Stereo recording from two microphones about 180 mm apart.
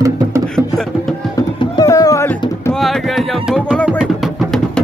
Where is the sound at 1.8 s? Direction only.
20° left (ahead or behind).